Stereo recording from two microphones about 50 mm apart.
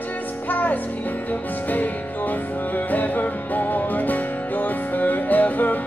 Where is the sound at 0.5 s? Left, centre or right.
Left.